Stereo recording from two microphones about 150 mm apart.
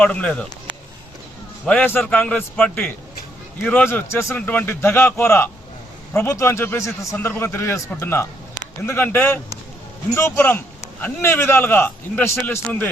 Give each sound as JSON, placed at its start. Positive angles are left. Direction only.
{"t": 0.0, "sound": "speech", "side_deg": 10}
{"t": 1.6, "sound": "speech", "side_deg": 10}